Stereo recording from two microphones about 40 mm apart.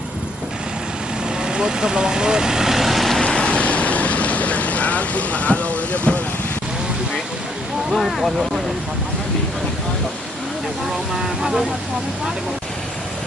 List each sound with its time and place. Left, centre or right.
1.4 s speech: centre
3.2 s vehicle: left
7.9 s speech: centre
11.2 s speech: centre